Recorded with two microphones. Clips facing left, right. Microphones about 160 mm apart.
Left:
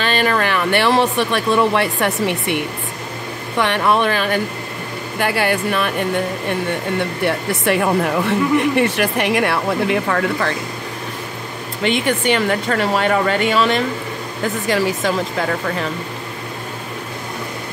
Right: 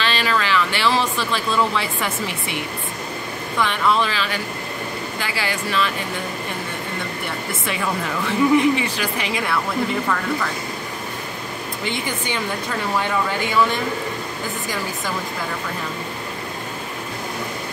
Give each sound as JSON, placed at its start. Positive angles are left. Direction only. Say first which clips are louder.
{"t": 0.0, "sound": "speech", "louder": "left 4 dB", "side_deg": 50}
{"t": 7.0, "sound": "speech", "louder": "left 8 dB", "side_deg": 65}
{"t": 11.8, "sound": "speech", "louder": "left 10 dB", "side_deg": 70}